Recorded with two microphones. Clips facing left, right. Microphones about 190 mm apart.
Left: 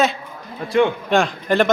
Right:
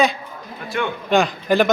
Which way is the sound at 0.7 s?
30° left (ahead or behind).